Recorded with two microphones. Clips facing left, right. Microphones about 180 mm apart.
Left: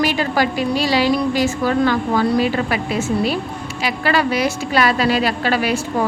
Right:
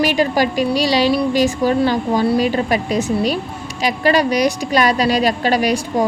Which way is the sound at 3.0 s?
15° right (ahead or behind).